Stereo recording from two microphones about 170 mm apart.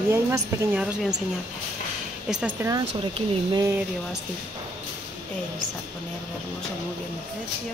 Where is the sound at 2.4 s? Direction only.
15° right (ahead or behind).